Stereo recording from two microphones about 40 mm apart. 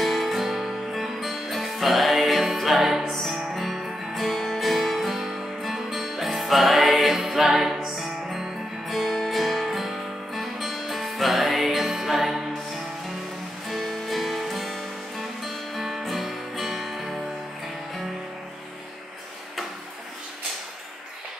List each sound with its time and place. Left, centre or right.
0.0 s music: centre
13.7 s music: centre